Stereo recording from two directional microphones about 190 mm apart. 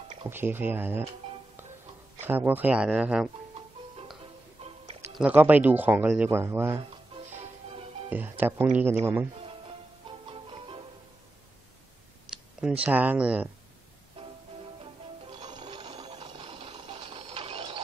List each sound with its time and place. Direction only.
0.2 s speech: 10° right (ahead or behind)
2.2 s speech: 10° right (ahead or behind)
4.6 s music: 35° right (ahead or behind)
5.1 s speech: 10° right (ahead or behind)
6.8 s music: 35° right (ahead or behind)
8.1 s speech: 10° right (ahead or behind)
10.0 s music: 25° right (ahead or behind)
12.5 s speech: 5° right (ahead or behind)
15.3 s sewing machine: 25° right (ahead or behind)